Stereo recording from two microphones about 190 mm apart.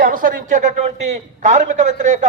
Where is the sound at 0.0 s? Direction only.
45° right (ahead or behind).